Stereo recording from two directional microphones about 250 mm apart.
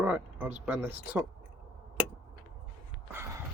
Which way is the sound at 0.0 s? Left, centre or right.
Centre.